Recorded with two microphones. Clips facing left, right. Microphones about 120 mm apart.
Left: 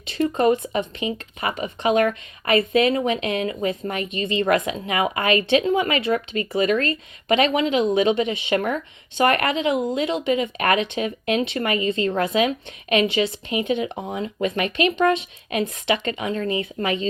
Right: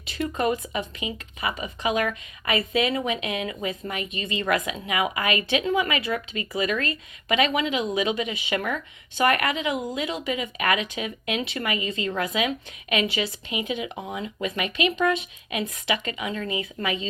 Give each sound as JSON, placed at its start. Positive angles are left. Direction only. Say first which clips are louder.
{"t": 0.1, "sound": "speech", "louder": "left 6 dB", "side_deg": 35}
{"t": 1.4, "sound": "speech", "louder": "left 2 dB", "side_deg": 55}
{"t": 1.6, "sound": "speech", "louder": "left 7 dB", "side_deg": 35}
{"t": 6.1, "sound": "speech", "louder": "left 6 dB", "side_deg": 45}
{"t": 14.4, "sound": "speech", "louder": "left 4 dB", "side_deg": 40}
{"t": 15.9, "sound": "speech", "louder": "left 4 dB", "side_deg": 30}